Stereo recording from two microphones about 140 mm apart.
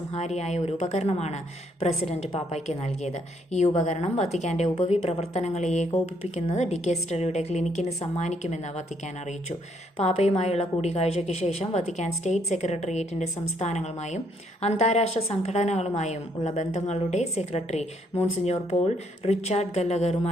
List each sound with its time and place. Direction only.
0.1 s a woman's voice: 50° left (ahead or behind)
10.0 s a woman's voice: 45° left (ahead or behind)